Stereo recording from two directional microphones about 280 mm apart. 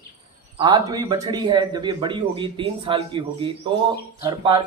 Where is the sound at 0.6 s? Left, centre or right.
Centre.